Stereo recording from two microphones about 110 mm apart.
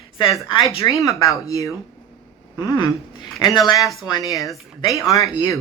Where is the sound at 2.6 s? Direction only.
40° left (ahead or behind).